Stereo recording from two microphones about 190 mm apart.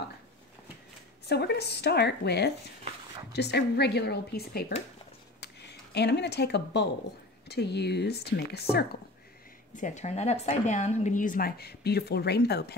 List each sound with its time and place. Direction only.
1.2 s speech: 60° left (ahead or behind)
9.8 s a woman's voice: 40° left (ahead or behind); by 12.7 s 60° left (ahead or behind)